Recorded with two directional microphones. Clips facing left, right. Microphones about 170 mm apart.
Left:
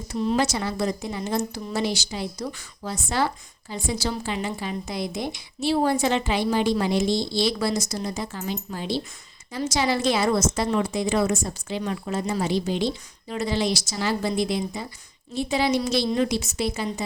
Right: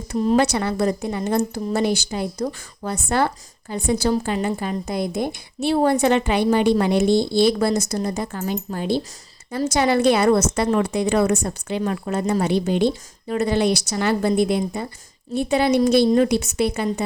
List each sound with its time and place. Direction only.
0.2 s speech: 45° right (ahead or behind)
0.4 s a woman's voice: 60° right (ahead or behind)
4.1 s a woman's voice: 45° right (ahead or behind)